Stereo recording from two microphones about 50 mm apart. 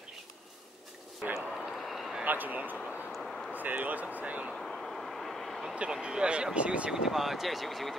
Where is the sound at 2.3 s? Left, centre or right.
Right.